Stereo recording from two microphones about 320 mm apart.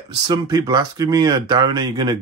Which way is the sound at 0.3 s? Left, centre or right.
Centre.